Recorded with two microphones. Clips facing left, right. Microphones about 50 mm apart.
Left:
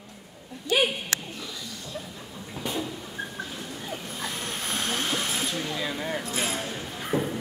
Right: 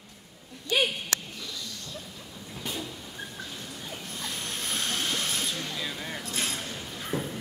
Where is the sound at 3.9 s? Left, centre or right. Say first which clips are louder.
Left 3 dB; centre.